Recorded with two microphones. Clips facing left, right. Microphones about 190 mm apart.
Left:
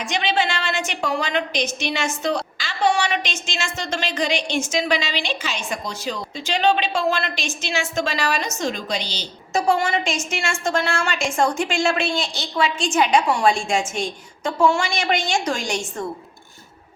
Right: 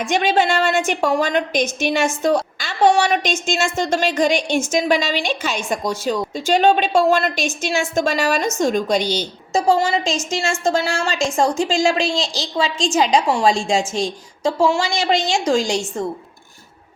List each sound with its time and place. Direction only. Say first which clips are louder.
0.0 s a woman's voice: right 5 dB; 50° right (ahead or behind)
9.6 s a woman's voice: right 3 dB; 30° right (ahead or behind)